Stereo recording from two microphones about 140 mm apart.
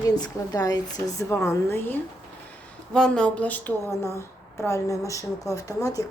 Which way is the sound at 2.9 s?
5° left (ahead or behind).